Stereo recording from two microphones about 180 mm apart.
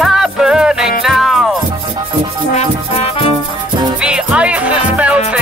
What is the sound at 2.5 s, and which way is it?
Music, 35° left (ahead or behind).